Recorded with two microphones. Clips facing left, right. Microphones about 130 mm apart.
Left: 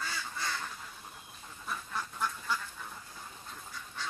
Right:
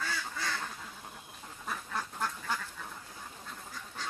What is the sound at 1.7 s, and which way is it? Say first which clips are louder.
Duck: right 1 dB; 60° right (ahead or behind).